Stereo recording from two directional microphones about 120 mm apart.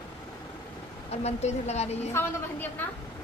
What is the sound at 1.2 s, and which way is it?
Speech, 65° left (ahead or behind).